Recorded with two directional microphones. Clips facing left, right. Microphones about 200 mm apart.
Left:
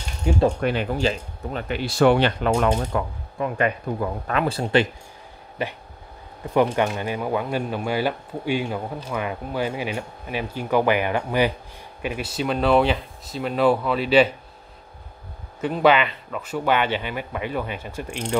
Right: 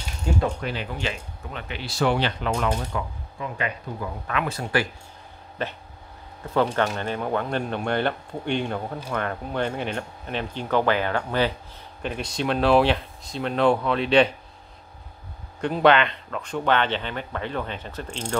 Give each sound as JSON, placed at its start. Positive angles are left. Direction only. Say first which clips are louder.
{"t": 0.3, "sound": "speech", "louder": "left 3 dB", "side_deg": 15}
{"t": 0.6, "sound": "speech", "louder": "left 7 dB", "side_deg": 55}
{"t": 0.9, "sound": "speech", "louder": "left 7 dB", "side_deg": 40}
{"t": 5.6, "sound": "speech", "louder": "left 2 dB", "side_deg": 10}
{"t": 15.6, "sound": "speech", "louder": "even", "side_deg": 5}